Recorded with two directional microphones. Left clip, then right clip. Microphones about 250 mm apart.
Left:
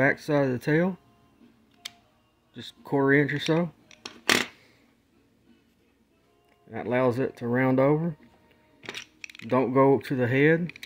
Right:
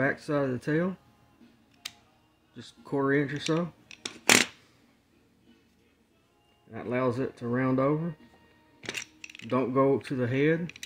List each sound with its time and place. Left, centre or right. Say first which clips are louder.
0.0 s speech: left 5 dB; left
2.5 s speech: left 4 dB; left
4.2 s a sound: right 2 dB; centre
6.7 s speech: left 4 dB; left
9.5 s speech: left 4 dB; left